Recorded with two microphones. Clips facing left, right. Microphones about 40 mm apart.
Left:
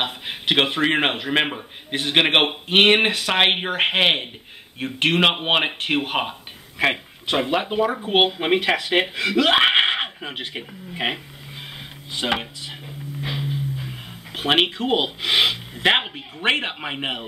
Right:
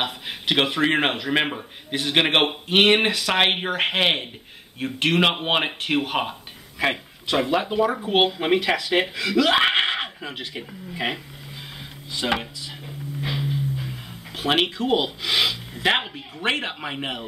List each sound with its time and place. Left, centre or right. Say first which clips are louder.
0.0 s a man's voice: left 1 dB; centre
13.2 s music: right 1 dB; centre
14.3 s speech: left 2 dB; centre